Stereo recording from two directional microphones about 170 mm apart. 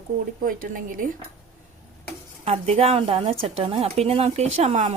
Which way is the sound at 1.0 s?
55° right (ahead or behind).